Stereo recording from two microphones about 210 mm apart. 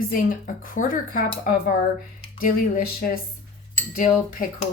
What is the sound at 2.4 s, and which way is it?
Speech, 40° left (ahead or behind).